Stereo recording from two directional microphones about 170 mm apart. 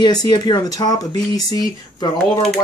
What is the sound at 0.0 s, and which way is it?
Speech, 25° left (ahead or behind).